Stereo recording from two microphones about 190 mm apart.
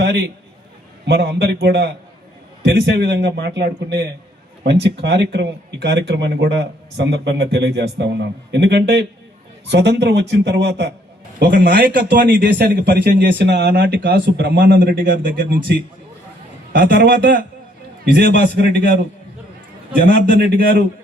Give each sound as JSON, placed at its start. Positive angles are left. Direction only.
{"t": 1.0, "sound": "speech", "side_deg": -60}
{"t": 11.3, "sound": "speech", "side_deg": -50}
{"t": 16.8, "sound": "speech", "side_deg": -55}
{"t": 20.1, "sound": "a man's voice", "side_deg": -50}